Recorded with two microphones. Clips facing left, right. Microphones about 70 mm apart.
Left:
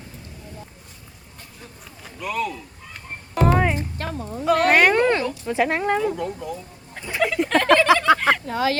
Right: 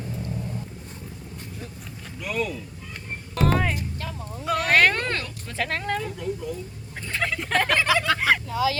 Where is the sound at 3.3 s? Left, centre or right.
Centre.